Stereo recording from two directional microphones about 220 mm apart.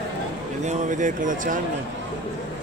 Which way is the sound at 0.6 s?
35° right (ahead or behind).